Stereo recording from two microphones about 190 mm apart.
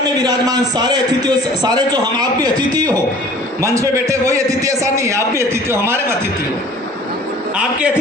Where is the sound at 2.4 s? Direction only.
20° right (ahead or behind).